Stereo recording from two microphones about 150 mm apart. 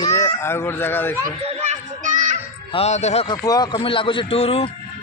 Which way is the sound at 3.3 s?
25° left (ahead or behind).